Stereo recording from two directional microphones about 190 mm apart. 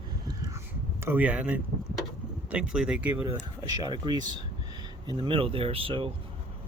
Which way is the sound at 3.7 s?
20° right (ahead or behind).